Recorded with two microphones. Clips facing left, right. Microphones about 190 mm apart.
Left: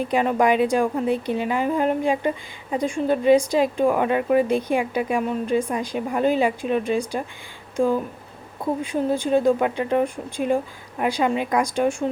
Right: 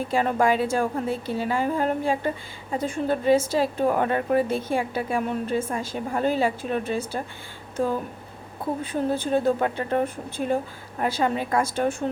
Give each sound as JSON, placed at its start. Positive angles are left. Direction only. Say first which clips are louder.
{"t": 0.1, "sound": "a woman's voice", "louder": "left 2 dB", "side_deg": 15}
{"t": 8.8, "sound": "a woman's voice", "louder": "left 2 dB", "side_deg": 15}